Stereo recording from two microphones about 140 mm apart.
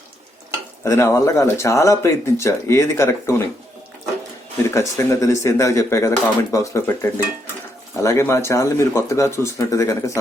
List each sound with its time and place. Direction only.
0.9 s speech: 20° left (ahead or behind)
4.7 s speech: 20° left (ahead or behind)